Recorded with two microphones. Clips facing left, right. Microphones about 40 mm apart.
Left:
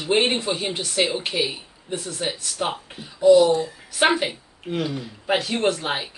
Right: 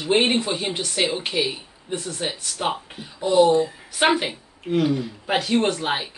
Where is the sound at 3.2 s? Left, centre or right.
Right.